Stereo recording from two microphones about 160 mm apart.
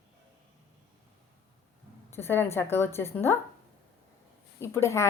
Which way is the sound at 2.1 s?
15° left (ahead or behind).